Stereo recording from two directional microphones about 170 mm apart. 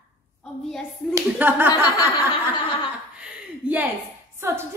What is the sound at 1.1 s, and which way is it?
Speech, 10° right (ahead or behind).